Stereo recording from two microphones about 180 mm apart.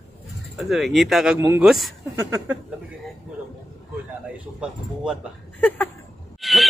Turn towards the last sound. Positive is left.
turn(degrees=0)  # may be behind; listen again after turning